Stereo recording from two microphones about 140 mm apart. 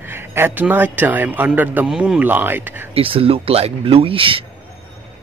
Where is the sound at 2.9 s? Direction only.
40° right (ahead or behind).